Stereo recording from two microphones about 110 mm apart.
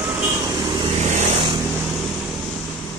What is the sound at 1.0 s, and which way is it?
Vehicle, 90° right.